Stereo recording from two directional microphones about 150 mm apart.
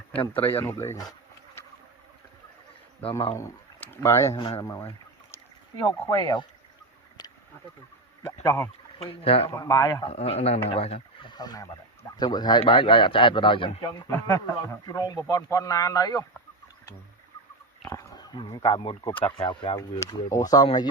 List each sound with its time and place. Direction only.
0.1 s speech: 10° left (ahead or behind)
3.3 s speech: 15° left (ahead or behind)
4.4 s a man's voice: 40° left (ahead or behind)
4.6 s boat: 20° left (ahead or behind)
5.8 s speech: 30° left (ahead or behind)
7.2 s a sound: 25° left (ahead or behind)
8.4 s speech: 15° left (ahead or behind)
9.0 s a man's voice: 40° left (ahead or behind)
9.5 s speech: 20° left (ahead or behind)
10.1 s a man's voice: 45° left (ahead or behind)
14.1 s speech: 10° left (ahead or behind)
17.8 s pig: 25° left (ahead or behind)
18.5 s a man's voice: 35° left (ahead or behind)
20.0 s speech: 20° left (ahead or behind)